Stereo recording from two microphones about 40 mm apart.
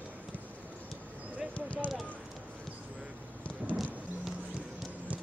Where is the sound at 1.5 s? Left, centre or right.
Left.